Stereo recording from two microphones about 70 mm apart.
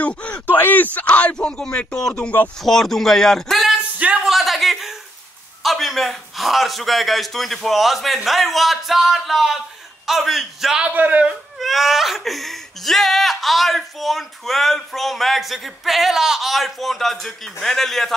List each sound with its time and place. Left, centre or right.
0.0 s speech: left
2.6 s speech: centre
4.2 s a sound: centre
5.6 s speech: centre
10.9 s a man's voice: right
11.2 s speech: centre